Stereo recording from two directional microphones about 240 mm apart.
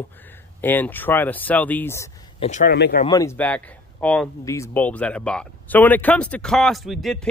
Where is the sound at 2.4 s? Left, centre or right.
Left.